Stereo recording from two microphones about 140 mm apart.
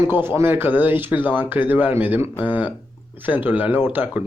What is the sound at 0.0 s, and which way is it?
Speech, 15° right (ahead or behind).